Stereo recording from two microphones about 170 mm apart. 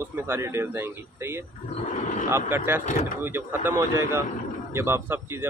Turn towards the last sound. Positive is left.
turn(degrees=-15)  # may be behind; listen again after turning